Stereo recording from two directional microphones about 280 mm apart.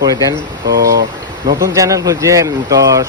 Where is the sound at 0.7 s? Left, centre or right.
Right.